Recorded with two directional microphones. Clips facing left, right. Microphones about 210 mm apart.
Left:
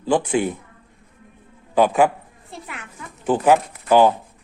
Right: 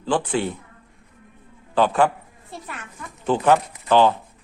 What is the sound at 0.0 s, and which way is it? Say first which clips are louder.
Speech: left 3 dB; 10° left (ahead or behind).